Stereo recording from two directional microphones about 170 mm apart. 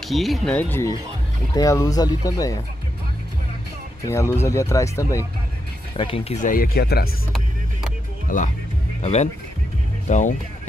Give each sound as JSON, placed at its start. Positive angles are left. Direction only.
{"t": 0.1, "sound": "speech", "side_deg": 0}
{"t": 4.0, "sound": "speech", "side_deg": 15}
{"t": 5.9, "sound": "speech", "side_deg": 30}
{"t": 6.4, "sound": "speech", "side_deg": 55}
{"t": 8.3, "sound": "speech", "side_deg": 55}
{"t": 9.0, "sound": "speech", "side_deg": 40}